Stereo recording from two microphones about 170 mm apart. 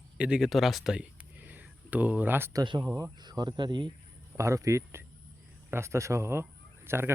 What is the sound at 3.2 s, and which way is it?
A man's voice, 25° right (ahead or behind).